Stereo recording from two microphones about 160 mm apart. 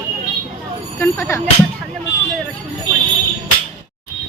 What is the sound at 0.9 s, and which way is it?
Speech, 15° left (ahead or behind).